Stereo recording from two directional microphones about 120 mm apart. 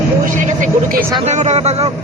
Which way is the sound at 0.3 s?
90° right.